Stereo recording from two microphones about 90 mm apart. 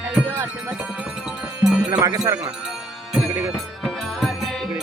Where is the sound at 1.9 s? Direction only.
50° right (ahead or behind).